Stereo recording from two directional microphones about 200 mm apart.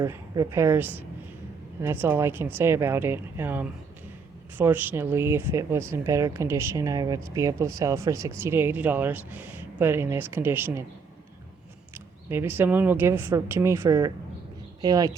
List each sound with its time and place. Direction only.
0.0 s speech: 15° right (ahead or behind)
11.9 s speech: 10° right (ahead or behind)